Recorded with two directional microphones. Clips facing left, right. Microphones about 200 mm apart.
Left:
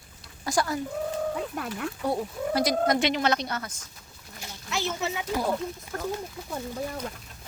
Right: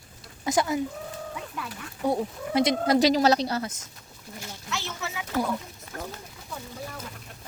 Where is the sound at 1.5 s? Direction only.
50° left (ahead or behind).